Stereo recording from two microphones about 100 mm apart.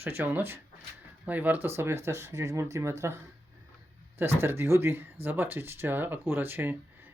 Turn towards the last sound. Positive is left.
turn(degrees=-20)  # may be behind; listen again after turning